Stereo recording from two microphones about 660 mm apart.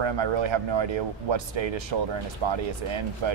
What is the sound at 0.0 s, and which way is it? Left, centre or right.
Speech, right.